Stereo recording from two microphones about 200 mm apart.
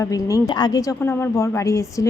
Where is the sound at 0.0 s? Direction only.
15° left (ahead or behind).